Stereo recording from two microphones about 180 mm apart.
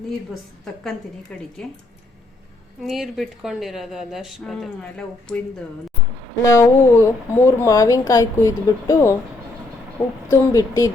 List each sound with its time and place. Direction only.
1.6 s speech: 5° left (ahead or behind)
2.8 s speech: centre (ahead or behind)
6.4 s speech: 15° left (ahead or behind)
10.2 s speech: 15° left (ahead or behind)